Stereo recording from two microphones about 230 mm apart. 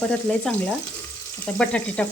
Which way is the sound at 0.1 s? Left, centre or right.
Centre.